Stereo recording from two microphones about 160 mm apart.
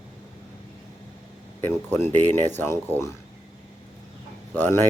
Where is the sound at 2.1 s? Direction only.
45° right (ahead or behind).